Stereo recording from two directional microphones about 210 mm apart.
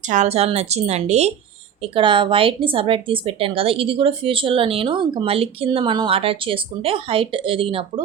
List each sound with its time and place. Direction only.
0.1 s a woman's voice: 30° right (ahead or behind)